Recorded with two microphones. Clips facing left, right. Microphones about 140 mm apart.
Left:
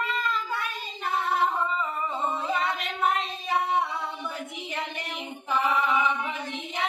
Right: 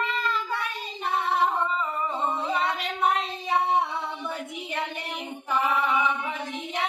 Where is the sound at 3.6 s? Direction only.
25° right (ahead or behind).